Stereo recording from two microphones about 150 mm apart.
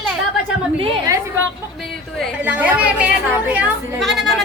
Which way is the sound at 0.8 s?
35° right (ahead or behind).